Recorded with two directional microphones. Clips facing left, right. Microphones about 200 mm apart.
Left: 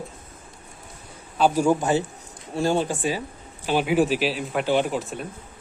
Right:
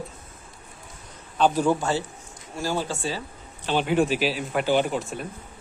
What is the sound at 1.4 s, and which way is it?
Speech, 10° left (ahead or behind).